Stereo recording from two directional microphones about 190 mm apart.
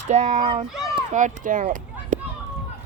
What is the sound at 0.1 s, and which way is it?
A child's voice, 35° right (ahead or behind).